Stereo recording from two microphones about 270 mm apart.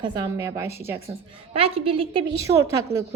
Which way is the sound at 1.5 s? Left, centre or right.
Right.